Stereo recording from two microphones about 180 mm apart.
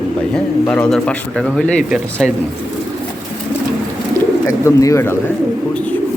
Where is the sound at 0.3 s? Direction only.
10° left (ahead or behind).